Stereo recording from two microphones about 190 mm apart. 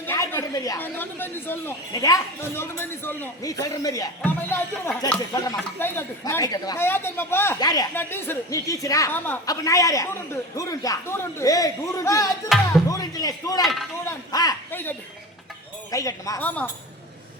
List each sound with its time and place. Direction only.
0.0 s a woman's voice: 10° left (ahead or behind)
5.3 s a woman's voice: 20° left (ahead or behind)
12.5 s a man's voice: centre (ahead or behind)
12.9 s speech: 20° left (ahead or behind)
13.6 s a man's voice: centre (ahead or behind)
14.3 s a man's voice: 20° left (ahead or behind)